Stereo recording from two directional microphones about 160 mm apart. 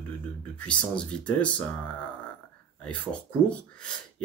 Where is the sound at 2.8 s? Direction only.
5° left (ahead or behind).